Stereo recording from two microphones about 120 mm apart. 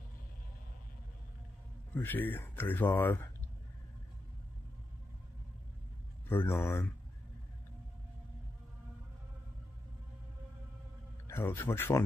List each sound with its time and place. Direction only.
2.0 s speech: 15° left (ahead or behind)
6.2 s speech: 20° left (ahead or behind)
11.2 s speech: 20° left (ahead or behind)